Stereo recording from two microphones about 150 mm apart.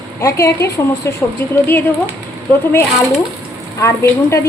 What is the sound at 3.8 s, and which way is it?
Speech, 20° left (ahead or behind).